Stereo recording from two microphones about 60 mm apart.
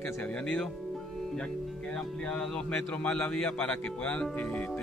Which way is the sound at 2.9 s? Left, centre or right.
Left.